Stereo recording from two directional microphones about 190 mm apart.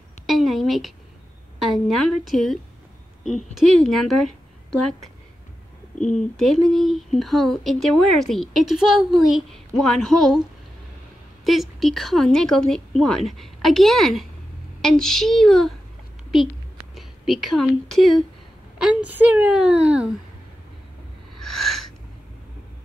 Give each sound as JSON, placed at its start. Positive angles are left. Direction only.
{"t": 0.3, "sound": "speech", "side_deg": 0}
{"t": 5.9, "sound": "speech", "side_deg": 40}
{"t": 6.3, "sound": "speech", "side_deg": 0}
{"t": 11.4, "sound": "speech", "side_deg": 0}
{"t": 16.9, "sound": "a woman's voice", "side_deg": 0}
{"t": 21.4, "sound": "a sound", "side_deg": 0}